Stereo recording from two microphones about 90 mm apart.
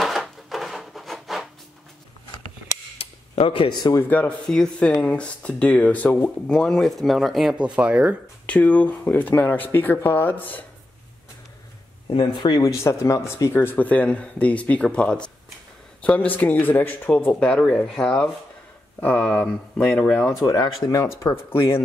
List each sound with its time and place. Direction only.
0.0 s wood: centre (ahead or behind)
3.0 s cutlery: 85° left
4.5 s speech: 10° left (ahead or behind)
7.5 s speech: 10° right (ahead or behind)
8.5 s speech: 15° left (ahead or behind)
12.1 s speech: 60° left (ahead or behind)
12.7 s speech: 35° left (ahead or behind)
13.7 s speech: 15° left (ahead or behind)
20.4 s speech: 45° left (ahead or behind); by 21.8 s 25° left (ahead or behind)